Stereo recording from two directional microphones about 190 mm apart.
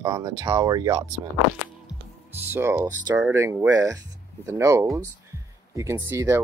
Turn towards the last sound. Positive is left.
turn(degrees=-15)  # may be behind; listen again after turning